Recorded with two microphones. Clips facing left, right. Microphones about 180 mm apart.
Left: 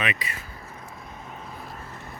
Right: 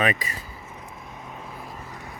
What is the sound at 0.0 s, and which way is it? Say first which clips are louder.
Speech: right 5 dB; 45° right (ahead or behind).